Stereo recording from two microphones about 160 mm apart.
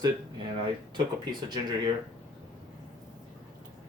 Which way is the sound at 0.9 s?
25° right (ahead or behind).